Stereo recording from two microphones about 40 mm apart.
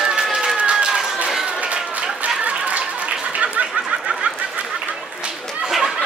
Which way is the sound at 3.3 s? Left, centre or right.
Right.